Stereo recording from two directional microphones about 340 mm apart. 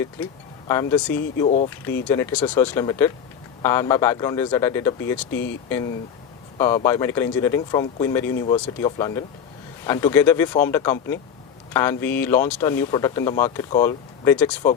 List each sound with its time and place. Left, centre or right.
0.7 s speech: centre
1.5 s speech: left
2.0 s speech: centre